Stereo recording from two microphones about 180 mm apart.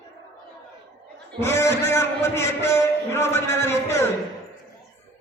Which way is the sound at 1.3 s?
15° left (ahead or behind).